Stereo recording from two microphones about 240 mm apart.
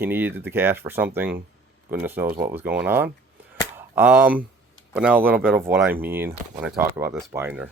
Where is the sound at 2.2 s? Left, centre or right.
Right.